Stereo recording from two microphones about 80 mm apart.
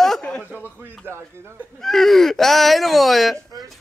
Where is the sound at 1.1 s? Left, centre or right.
Right.